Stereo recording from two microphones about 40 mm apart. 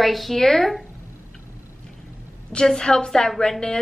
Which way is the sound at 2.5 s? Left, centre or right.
Left.